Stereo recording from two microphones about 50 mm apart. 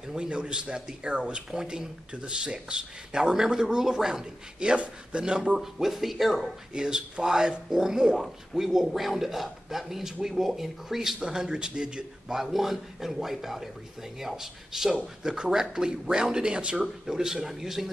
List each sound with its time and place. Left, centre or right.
0.1 s speech: centre
6.7 s speech: centre